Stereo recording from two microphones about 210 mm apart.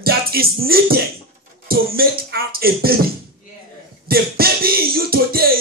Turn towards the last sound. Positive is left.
turn(degrees=-45)  # may be behind; listen again after turning